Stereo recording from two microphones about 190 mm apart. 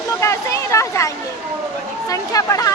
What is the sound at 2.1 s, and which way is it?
Speech, 15° left (ahead or behind).